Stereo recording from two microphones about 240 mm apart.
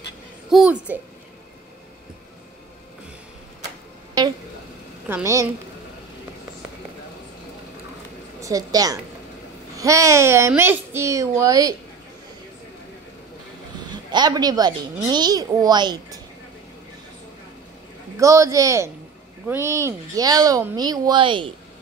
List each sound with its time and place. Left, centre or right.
0.5 s a child's voice: centre
5.0 s a child's voice: centre
8.4 s a woman's voice: centre
13.8 s a child's voice: centre
18.1 s a child's voice: centre